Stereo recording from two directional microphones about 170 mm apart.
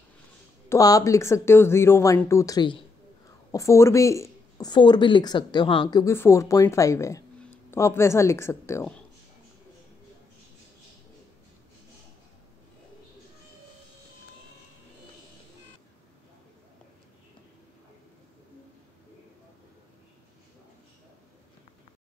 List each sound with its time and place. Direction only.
0.7 s speech: 20° left (ahead or behind)